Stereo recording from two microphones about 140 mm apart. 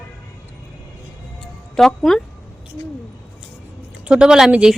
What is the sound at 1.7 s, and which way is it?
Speech, 5° left (ahead or behind).